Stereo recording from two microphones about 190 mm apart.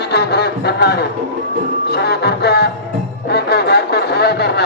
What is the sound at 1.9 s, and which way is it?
Music, 60° left (ahead or behind).